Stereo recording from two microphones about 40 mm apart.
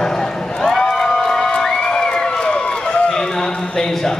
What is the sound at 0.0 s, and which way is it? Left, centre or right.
Run, centre.